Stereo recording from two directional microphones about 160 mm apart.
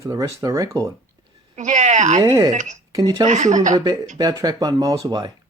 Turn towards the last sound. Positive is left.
turn(degrees=-20)  # may be behind; listen again after turning